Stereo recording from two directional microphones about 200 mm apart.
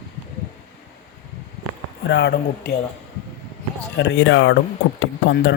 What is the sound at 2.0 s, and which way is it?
Speech, 60° left (ahead or behind).